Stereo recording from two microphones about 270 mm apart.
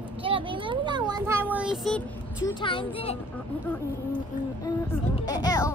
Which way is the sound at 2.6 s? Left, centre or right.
Centre.